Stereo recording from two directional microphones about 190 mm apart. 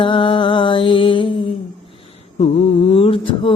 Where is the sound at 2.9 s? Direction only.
30° left (ahead or behind).